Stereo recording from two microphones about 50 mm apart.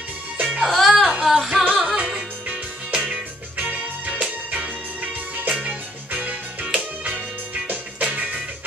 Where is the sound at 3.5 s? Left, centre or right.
Right.